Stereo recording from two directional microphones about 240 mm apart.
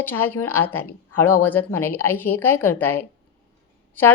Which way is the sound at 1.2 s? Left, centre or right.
Left.